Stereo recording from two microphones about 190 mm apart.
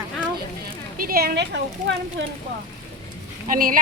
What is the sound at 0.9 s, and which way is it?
Speech, 50° right (ahead or behind).